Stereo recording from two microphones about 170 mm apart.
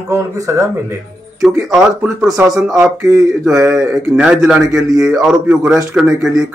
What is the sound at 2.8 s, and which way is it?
Speech, 15° right (ahead or behind).